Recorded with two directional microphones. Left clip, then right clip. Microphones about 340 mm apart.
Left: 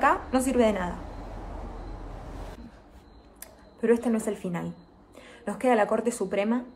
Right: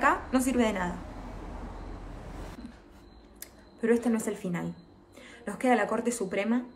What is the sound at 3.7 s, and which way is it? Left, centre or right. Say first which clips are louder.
A woman's voice: left 3 dB; centre.